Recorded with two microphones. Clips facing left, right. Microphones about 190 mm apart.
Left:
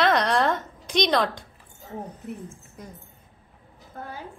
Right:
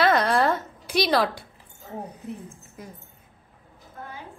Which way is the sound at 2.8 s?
5° right (ahead or behind).